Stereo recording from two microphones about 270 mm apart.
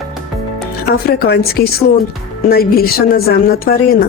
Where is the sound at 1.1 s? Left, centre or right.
Left.